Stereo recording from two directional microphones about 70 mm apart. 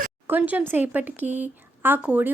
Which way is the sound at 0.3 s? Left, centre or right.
Right.